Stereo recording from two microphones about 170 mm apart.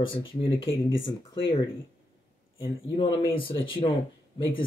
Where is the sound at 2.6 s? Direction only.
30° left (ahead or behind).